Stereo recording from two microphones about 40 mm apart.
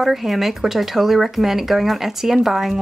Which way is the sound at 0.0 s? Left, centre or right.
Centre.